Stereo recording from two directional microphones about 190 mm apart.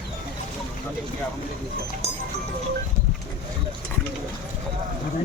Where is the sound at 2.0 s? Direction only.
35° right (ahead or behind).